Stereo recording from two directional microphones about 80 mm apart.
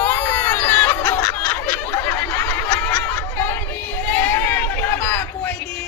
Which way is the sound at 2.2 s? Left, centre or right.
Left.